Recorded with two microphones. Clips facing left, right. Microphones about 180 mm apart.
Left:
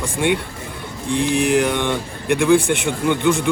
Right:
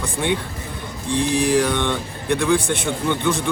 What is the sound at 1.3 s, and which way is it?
Mantra, 35° right (ahead or behind).